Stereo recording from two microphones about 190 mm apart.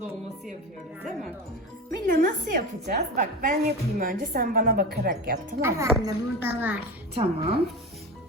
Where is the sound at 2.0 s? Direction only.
45° right (ahead or behind).